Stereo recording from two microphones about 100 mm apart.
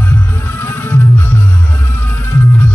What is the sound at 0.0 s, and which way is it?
Music, 25° left (ahead or behind).